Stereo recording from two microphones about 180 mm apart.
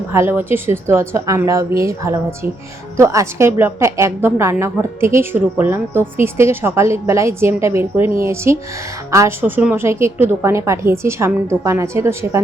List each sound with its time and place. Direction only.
0.1 s a woman's voice: 15° right (ahead or behind)